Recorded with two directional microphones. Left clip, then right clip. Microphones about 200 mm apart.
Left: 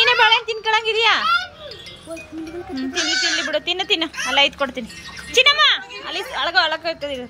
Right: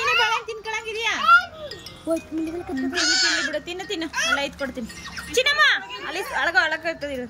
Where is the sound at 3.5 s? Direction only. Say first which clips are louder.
Left 9 dB; centre (ahead or behind).